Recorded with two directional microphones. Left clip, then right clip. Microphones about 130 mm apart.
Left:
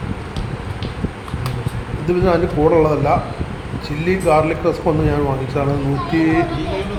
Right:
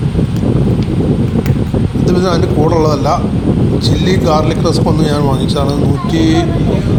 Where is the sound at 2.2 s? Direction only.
55° right (ahead or behind).